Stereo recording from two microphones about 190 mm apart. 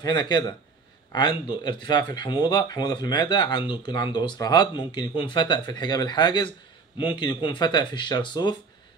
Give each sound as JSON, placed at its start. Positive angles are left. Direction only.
{"t": 0.0, "sound": "speech", "side_deg": 20}